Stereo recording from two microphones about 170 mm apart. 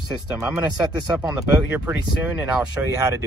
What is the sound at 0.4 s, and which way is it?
Speech, 15° right (ahead or behind).